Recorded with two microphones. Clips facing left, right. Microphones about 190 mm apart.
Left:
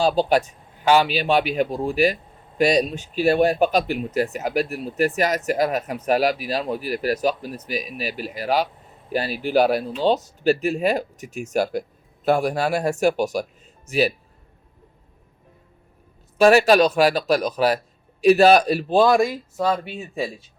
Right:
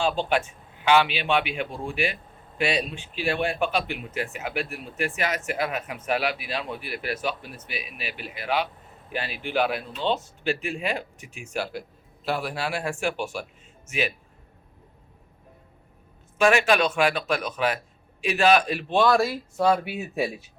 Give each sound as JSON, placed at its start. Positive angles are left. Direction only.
{"t": 0.0, "sound": "speech", "side_deg": 35}
{"t": 16.4, "sound": "speech", "side_deg": 35}
{"t": 19.1, "sound": "speech", "side_deg": 15}
{"t": 19.5, "sound": "speech", "side_deg": -5}